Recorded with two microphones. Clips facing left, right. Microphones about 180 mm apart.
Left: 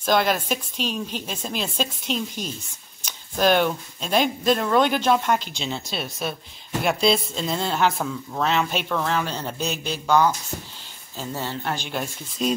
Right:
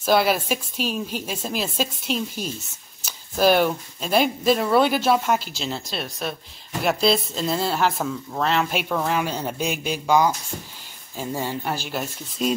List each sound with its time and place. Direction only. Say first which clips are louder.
0.0 s a woman's voice: right 2 dB; 5° right (ahead or behind)